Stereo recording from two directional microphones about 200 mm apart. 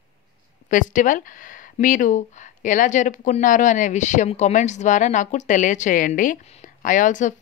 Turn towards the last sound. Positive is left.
turn(degrees=40)  # may be behind; listen again after turning